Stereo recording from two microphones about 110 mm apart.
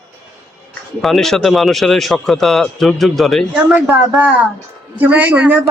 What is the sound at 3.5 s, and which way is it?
Speech, 20° right (ahead or behind).